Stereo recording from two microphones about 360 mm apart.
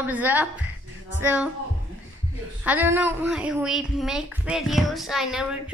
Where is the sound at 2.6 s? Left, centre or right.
Centre.